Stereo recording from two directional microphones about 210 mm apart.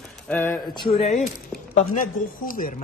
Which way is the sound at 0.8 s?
30° left (ahead or behind).